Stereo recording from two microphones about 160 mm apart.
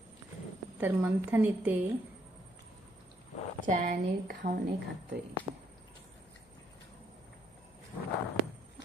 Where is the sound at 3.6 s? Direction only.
55° right (ahead or behind).